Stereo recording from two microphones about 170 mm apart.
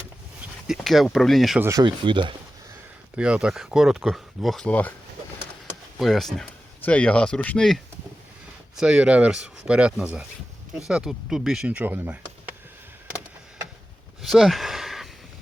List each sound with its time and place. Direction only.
0.7 s speech: centre (ahead or behind)
1.6 s speech: 25° right (ahead or behind)
3.2 s speech: 5° right (ahead or behind); by 4.9 s 10° left (ahead or behind)
6.0 s speech: centre (ahead or behind)
14.2 s a sound: centre (ahead or behind)